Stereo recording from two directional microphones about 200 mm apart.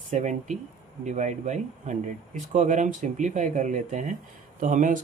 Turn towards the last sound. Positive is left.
turn(degrees=-40)  # may be behind; listen again after turning